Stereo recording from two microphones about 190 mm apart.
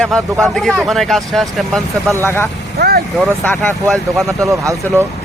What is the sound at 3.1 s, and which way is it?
Speech, centre (ahead or behind).